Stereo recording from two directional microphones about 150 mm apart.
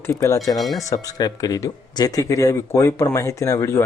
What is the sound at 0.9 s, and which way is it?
Speech, 25° left (ahead or behind).